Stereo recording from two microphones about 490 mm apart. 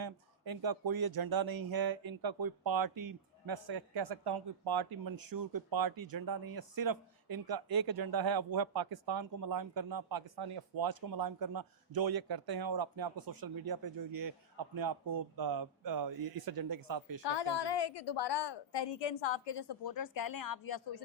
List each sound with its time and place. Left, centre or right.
0.0 s speech: right
17.2 s a woman's voice: left